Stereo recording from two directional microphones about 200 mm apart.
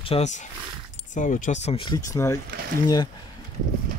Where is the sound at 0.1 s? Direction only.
35° left (ahead or behind).